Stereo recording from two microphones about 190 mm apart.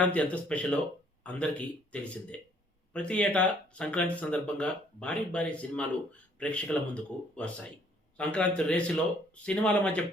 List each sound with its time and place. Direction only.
0.0 s speech: 5° left (ahead or behind)